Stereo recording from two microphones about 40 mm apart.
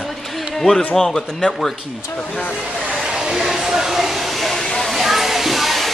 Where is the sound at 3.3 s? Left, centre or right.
Centre.